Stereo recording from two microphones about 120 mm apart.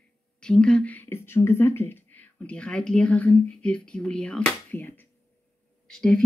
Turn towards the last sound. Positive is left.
turn(degrees=5)  # may be behind; listen again after turning